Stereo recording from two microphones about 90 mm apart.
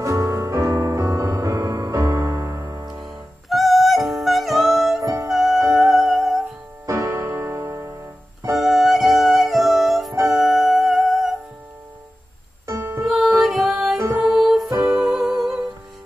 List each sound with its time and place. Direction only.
0.0 s music: 35° right (ahead or behind)
3.4 s music: centre (ahead or behind)
5.0 s music: 35° right (ahead or behind)
5.3 s music: 5° right (ahead or behind)
6.9 s music: 35° right (ahead or behind)
8.5 s music: centre (ahead or behind)
12.6 s music: 35° right (ahead or behind)
13.0 s music: 5° right (ahead or behind)
13.9 s music: 35° right (ahead or behind)
14.2 s music: 5° right (ahead or behind)